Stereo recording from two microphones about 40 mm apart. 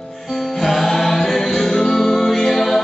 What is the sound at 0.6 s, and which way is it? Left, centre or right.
Music, centre.